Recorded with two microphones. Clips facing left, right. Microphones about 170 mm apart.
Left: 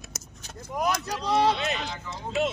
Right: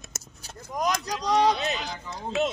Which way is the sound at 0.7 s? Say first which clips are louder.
Even; 10° left (ahead or behind).